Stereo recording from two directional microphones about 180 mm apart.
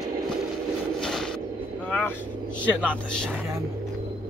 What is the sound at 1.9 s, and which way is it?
Speech, 5° left (ahead or behind).